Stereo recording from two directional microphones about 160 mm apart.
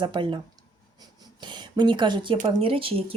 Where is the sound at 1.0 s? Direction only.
25° right (ahead or behind).